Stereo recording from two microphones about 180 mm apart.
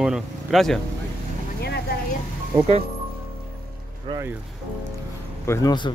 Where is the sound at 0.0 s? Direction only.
Centre (ahead or behind).